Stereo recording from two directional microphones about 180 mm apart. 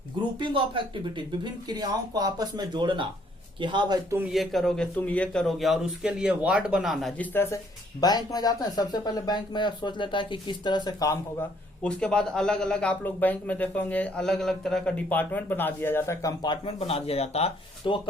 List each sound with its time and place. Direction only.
0.3 s speech: 25° right (ahead or behind)
4.2 s a man's voice: centre (ahead or behind)
8.0 s speech: 20° left (ahead or behind)
11.8 s speech: 5° left (ahead or behind); by 18.0 s 30° left (ahead or behind)